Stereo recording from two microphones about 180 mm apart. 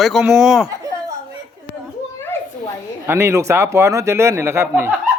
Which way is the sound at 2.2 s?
10° left (ahead or behind).